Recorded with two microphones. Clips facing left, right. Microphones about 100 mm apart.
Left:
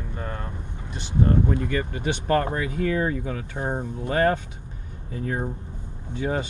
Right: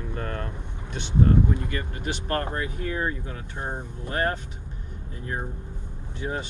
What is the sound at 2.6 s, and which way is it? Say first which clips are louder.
Speech: left 5 dB; 90° left.